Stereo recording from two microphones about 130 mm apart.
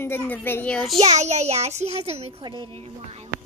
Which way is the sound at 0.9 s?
55° right (ahead or behind).